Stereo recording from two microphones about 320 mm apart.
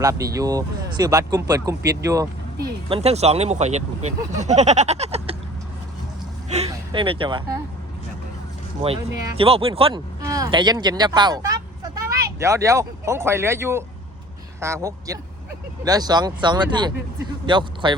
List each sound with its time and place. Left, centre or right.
0.0 s speech: centre
2.0 s vehicle: centre
2.9 s speech: centre
6.5 s a sound: centre
8.8 s speech: centre